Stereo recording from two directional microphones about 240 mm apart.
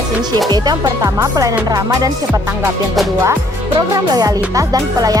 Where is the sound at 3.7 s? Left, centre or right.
Centre.